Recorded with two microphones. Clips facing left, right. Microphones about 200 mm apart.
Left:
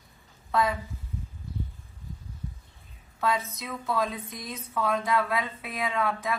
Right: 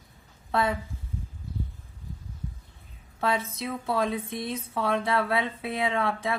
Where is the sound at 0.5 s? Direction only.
30° right (ahead or behind).